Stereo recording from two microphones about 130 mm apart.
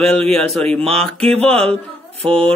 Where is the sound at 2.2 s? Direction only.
50° right (ahead or behind).